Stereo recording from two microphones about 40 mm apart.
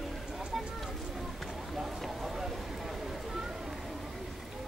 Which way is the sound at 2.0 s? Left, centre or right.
Centre.